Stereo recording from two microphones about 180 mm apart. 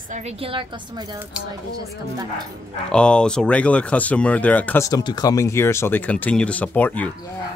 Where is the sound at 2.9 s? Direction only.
5° left (ahead or behind).